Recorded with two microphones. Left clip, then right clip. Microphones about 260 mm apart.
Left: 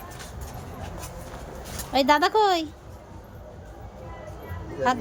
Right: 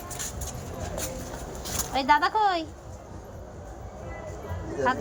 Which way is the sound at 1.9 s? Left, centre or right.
Centre.